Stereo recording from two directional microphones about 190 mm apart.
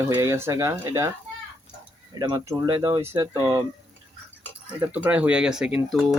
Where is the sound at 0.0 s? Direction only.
15° right (ahead or behind).